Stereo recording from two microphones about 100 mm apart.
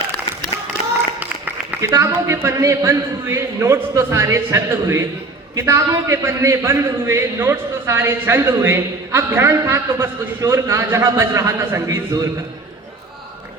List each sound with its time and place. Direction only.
1.8 s a man's voice: 30° right (ahead or behind)